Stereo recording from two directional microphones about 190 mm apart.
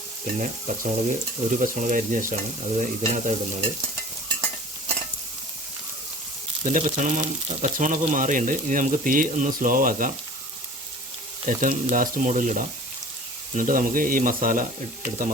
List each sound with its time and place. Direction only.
0.3 s speech: 40° right (ahead or behind)
2.3 s stir: 40° right (ahead or behind)
6.7 s speech: 40° right (ahead or behind)
11.4 s speech: 45° right (ahead or behind)